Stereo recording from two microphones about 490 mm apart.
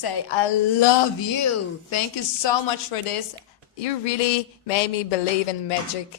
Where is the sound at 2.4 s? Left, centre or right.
Left.